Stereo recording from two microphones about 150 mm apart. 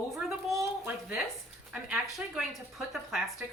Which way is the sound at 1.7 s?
Centre (ahead or behind).